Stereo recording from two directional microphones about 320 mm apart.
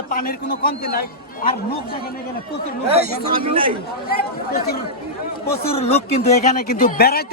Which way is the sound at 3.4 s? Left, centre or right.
Centre.